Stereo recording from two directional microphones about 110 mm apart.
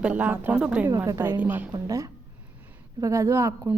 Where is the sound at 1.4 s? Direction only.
15° right (ahead or behind).